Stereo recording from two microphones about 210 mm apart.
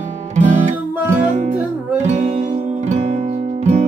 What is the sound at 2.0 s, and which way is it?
Music, 35° right (ahead or behind).